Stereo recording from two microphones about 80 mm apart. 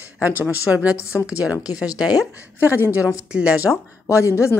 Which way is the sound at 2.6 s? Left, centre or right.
Right.